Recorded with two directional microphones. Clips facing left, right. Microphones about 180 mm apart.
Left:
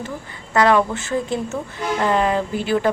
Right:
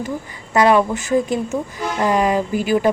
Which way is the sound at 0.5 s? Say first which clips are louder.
Right 2 dB; 15° right (ahead or behind).